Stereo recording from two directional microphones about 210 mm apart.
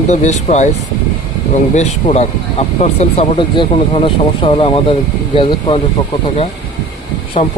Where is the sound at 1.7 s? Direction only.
30° left (ahead or behind).